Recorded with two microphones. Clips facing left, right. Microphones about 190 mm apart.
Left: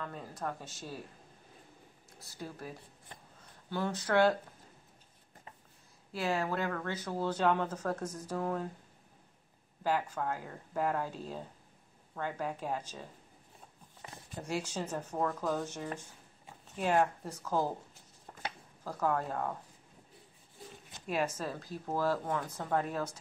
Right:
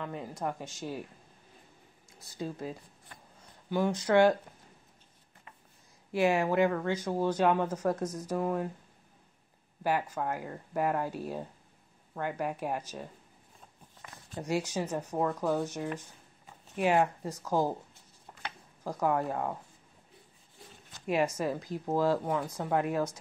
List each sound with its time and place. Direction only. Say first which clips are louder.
0.0 s speech: right 4 dB; 15° right (ahead or behind)
2.3 s speech: right 7 dB; 20° right (ahead or behind)
3.7 s speech: right 5 dB; 15° right (ahead or behind)
6.1 s speech: right 7 dB; 15° right (ahead or behind)
9.8 s speech: right 2 dB; 10° right (ahead or behind)
14.0 s a sound: left 2 dB; 30° left (ahead or behind)
14.7 s speech: right 4 dB; 10° right (ahead or behind)
18.9 s speech: right 3 dB; 15° right (ahead or behind)
21.1 s speech: right 5 dB; 15° right (ahead or behind)